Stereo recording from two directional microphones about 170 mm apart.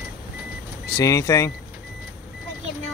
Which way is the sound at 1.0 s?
20° left (ahead or behind).